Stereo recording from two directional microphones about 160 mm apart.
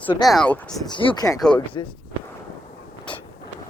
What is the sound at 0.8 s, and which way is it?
Speech, 30° left (ahead or behind).